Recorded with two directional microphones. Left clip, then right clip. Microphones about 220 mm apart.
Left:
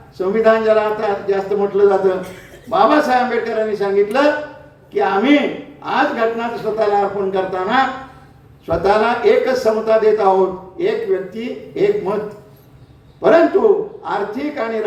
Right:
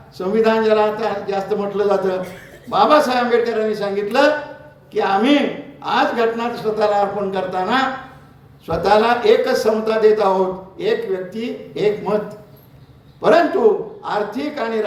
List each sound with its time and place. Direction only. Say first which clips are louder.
0.2 s a man's voice: left 2 dB; 45° right (ahead or behind)
13.2 s a man's voice: left 2 dB; 45° right (ahead or behind)